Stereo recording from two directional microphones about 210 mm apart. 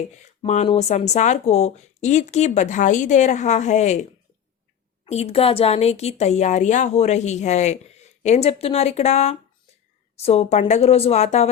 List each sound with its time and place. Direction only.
0.2 s speech: 35° left (ahead or behind)
5.0 s speech: 30° left (ahead or behind)